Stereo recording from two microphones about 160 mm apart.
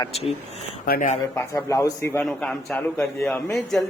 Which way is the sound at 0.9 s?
55° left (ahead or behind).